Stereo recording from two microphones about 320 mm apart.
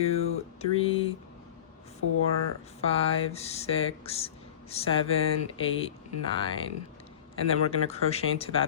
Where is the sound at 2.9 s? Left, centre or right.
Centre.